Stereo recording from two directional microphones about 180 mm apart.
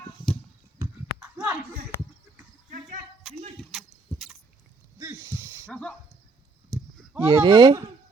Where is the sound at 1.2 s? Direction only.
10° right (ahead or behind).